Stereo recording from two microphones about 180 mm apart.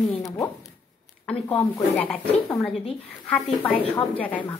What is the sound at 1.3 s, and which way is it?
Speech, 25° left (ahead or behind).